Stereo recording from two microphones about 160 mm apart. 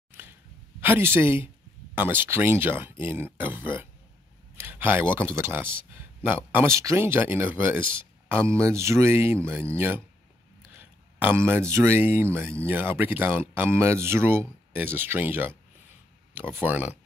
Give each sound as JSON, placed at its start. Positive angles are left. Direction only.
{"t": 0.7, "sound": "speech", "side_deg": -15}
{"t": 16.6, "sound": "speech", "side_deg": -10}